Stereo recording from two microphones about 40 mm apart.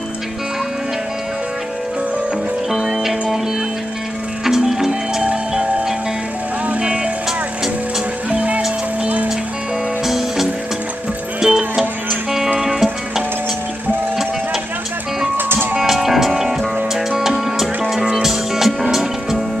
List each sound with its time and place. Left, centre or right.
2.7 s music: centre
4.5 s music: centre
8.3 s music: right
10.0 s music: centre
15.3 s music: right
15.9 s music: centre